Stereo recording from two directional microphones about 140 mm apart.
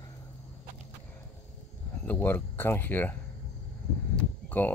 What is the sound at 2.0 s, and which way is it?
Speech, 15° left (ahead or behind).